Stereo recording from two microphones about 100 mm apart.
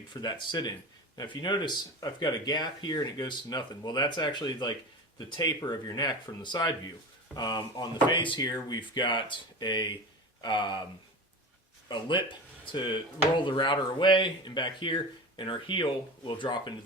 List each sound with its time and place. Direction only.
0.1 s speech: 45° left (ahead or behind)
11.9 s speech: 50° left (ahead or behind)